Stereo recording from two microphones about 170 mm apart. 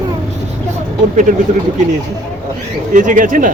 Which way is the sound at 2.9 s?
50° right (ahead or behind).